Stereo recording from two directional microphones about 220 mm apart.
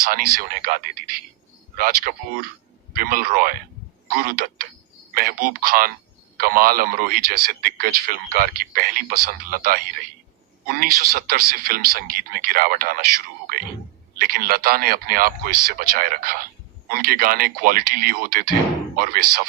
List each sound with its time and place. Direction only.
0.1 s a man's voice: 45° right (ahead or behind)